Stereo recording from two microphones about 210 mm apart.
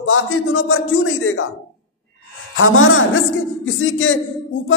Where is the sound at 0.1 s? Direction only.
70° left (ahead or behind).